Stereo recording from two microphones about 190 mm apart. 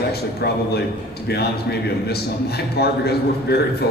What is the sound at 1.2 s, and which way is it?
A man's voice, 60° left (ahead or behind).